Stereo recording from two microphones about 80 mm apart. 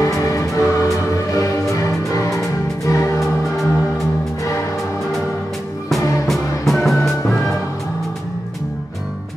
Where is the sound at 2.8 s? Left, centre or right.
Left.